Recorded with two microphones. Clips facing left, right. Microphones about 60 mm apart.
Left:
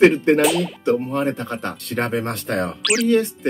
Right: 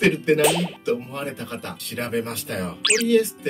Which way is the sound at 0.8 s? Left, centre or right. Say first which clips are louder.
Left 9 dB; left.